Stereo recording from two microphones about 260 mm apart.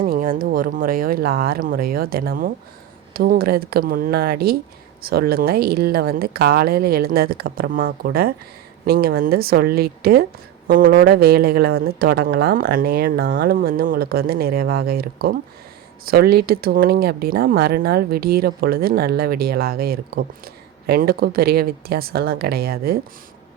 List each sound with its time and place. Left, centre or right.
0.0 s speech: right